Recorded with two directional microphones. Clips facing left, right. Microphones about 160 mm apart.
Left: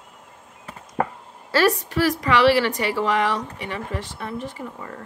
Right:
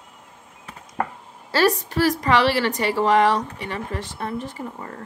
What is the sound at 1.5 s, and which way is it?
A woman's voice, 35° right (ahead or behind).